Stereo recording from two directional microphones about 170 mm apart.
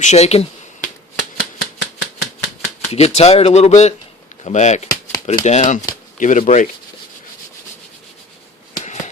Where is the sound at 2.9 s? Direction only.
40° left (ahead or behind).